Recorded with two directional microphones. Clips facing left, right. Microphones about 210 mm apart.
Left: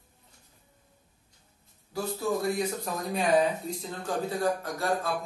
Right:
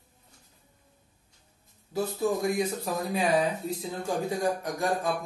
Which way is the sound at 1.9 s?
10° right (ahead or behind).